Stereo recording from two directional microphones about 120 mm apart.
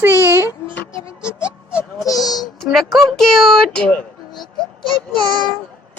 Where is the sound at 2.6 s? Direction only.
Centre (ahead or behind).